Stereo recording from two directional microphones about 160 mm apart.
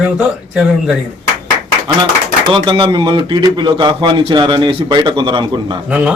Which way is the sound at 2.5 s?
30° right (ahead or behind).